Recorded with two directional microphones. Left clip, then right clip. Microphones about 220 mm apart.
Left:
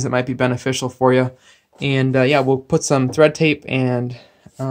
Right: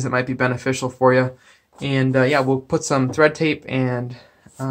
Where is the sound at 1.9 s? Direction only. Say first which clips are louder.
Left 2 dB; 55° left (ahead or behind); by 3.8 s 75° left (ahead or behind).